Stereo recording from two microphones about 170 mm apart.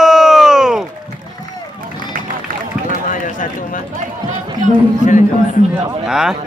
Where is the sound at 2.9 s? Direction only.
50° left (ahead or behind).